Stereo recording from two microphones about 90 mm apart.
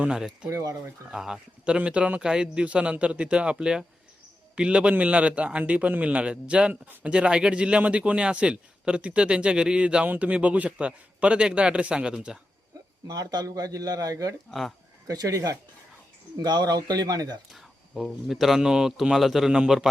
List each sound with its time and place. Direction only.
0.0 s a man's voice: 5° right (ahead or behind)
0.5 s speech: 35° right (ahead or behind)
1.1 s a man's voice: 5° right (ahead or behind)
13.1 s speech: 45° right (ahead or behind)
16.4 s speech: 50° right (ahead or behind)
17.5 s speech: centre (ahead or behind)